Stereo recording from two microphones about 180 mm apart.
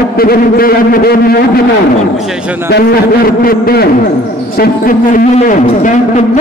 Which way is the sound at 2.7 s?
65° left (ahead or behind).